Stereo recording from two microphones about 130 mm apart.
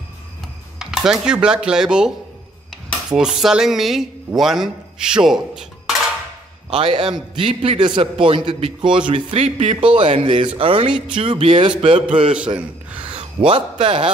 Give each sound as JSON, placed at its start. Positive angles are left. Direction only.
{"t": 0.7, "sound": "speech", "side_deg": -5}
{"t": 6.7, "sound": "speech", "side_deg": -50}
{"t": 7.1, "sound": "a man's voice", "side_deg": -40}
{"t": 9.3, "sound": "speech", "side_deg": -55}
{"t": 9.8, "sound": "a man's voice", "side_deg": -40}
{"t": 12.5, "sound": "a sound", "side_deg": -10}
{"t": 13.1, "sound": "a man's voice", "side_deg": -45}